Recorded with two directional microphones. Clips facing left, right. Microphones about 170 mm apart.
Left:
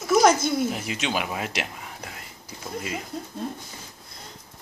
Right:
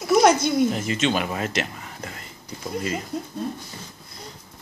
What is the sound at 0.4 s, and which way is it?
Speech, 5° left (ahead or behind).